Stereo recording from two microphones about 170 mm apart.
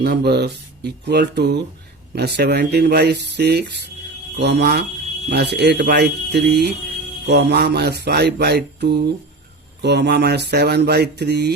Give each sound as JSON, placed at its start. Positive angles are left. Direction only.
{"t": 0.0, "sound": "mantra", "side_deg": -75}
{"t": 4.4, "sound": "speech", "side_deg": -85}
{"t": 5.3, "sound": "mantra", "side_deg": -75}